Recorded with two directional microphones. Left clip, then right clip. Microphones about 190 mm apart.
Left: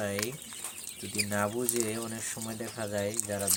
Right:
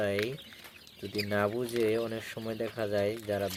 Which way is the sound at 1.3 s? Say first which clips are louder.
Right 1 dB; 20° right (ahead or behind).